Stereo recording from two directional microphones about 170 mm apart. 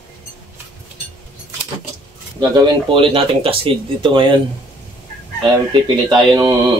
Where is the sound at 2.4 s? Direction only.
25° right (ahead or behind).